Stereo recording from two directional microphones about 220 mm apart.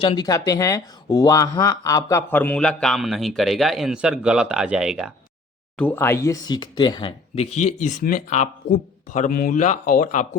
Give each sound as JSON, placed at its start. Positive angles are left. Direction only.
{"t": 0.0, "sound": "speech", "side_deg": 20}
{"t": 5.7, "sound": "speech", "side_deg": 10}